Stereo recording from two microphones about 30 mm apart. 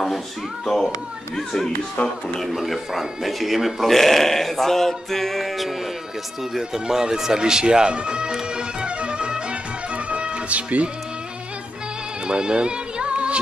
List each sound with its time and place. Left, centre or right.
2.0 s speech: left
2.4 s speech: centre
3.8 s music: centre
6.5 s music: centre; by 10.4 s right
10.5 s speech: right
12.3 s music: right